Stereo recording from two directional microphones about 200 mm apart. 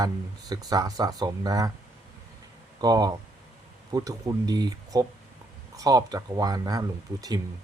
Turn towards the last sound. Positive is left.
turn(degrees=-20)  # may be behind; listen again after turning